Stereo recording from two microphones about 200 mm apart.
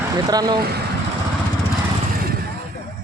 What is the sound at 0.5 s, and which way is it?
Speech, 50° right (ahead or behind).